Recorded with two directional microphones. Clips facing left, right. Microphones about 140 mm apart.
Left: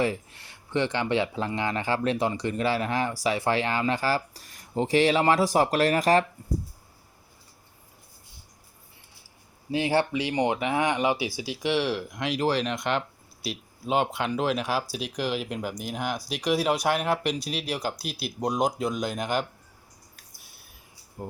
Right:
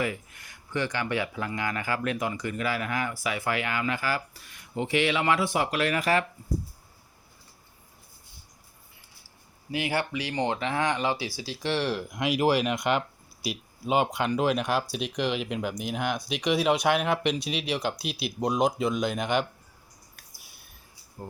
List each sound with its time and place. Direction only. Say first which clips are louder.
0.0 s speech: left 4 dB; 30° left (ahead or behind)
9.7 s speech: left 5 dB; 30° left (ahead or behind); by 19.5 s centre (ahead or behind)
20.3 s a sound: even; centre (ahead or behind)